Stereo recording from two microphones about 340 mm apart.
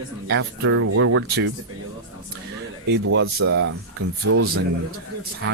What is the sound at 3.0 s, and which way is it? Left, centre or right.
Speech, right.